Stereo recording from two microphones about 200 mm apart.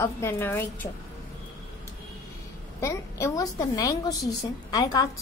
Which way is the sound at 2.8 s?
15° left (ahead or behind).